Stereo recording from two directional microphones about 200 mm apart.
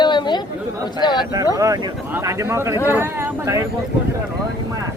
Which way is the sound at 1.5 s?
20° right (ahead or behind).